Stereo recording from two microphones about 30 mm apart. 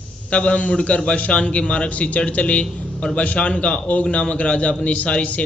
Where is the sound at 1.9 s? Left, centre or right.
Left.